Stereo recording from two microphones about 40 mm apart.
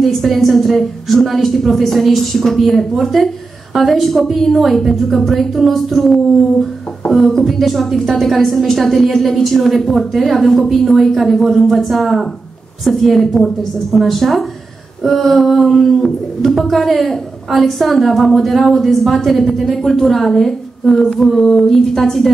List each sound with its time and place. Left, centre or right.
0.0 s a woman's voice: centre